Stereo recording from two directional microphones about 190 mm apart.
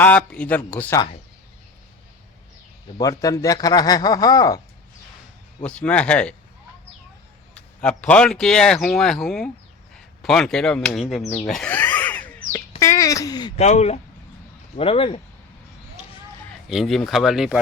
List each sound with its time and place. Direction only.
0.0 s speech: 5° left (ahead or behind)
3.0 s speech: 20° left (ahead or behind)
5.6 s speech: 5° left (ahead or behind)
7.5 s speech: 5° left (ahead or behind)
11.4 s a sound: 5° left (ahead or behind)
12.8 s speech: 15° left (ahead or behind)
13.6 s speech: 35° left (ahead or behind)
16.6 s speech: centre (ahead or behind)